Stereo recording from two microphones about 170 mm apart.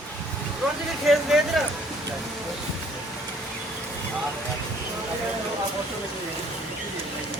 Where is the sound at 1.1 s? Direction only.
Centre (ahead or behind).